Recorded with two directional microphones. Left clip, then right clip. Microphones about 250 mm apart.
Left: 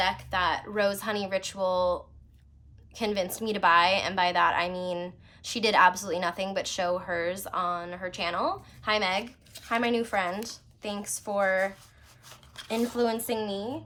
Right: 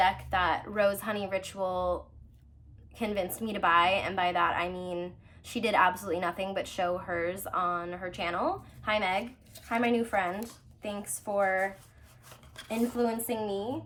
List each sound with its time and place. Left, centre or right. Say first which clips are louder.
0.0 s speech: even; centre
2.9 s a woman's voice: left 3 dB; centre
13.0 s a woman's voice: left 3 dB; centre